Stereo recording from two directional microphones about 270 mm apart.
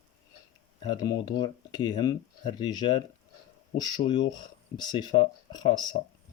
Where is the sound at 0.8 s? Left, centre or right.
Centre.